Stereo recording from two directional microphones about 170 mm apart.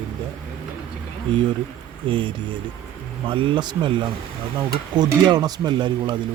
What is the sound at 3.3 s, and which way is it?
A man's voice, 30° right (ahead or behind).